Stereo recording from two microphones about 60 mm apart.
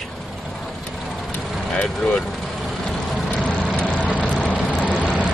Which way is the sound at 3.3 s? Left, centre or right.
Centre.